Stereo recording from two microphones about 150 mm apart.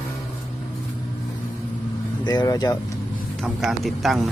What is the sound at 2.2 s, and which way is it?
Speech, 25° left (ahead or behind).